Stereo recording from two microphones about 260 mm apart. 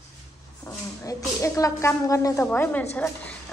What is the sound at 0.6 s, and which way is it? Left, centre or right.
A woman's voice, centre.